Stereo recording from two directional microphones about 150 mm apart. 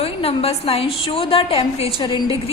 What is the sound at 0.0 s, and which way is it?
A woman's voice, 40° left (ahead or behind).